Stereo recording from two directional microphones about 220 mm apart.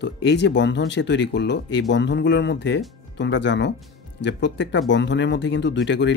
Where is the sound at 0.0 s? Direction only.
50° left (ahead or behind).